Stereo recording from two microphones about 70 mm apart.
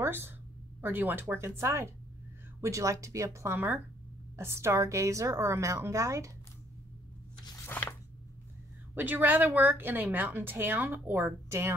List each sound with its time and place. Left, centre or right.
0.0 s a sound: right
0.7 s speech: right
1.6 s a woman's voice: right
3.5 s a woman's voice: right
7.6 s a sound: left
8.9 s a woman's voice: right